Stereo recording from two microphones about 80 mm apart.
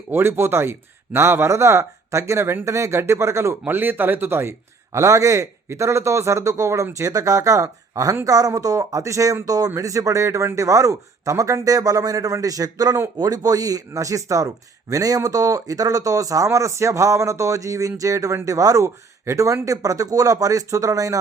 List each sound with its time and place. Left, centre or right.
0.1 s speech: right
3.7 s speech: right
4.9 s speech: right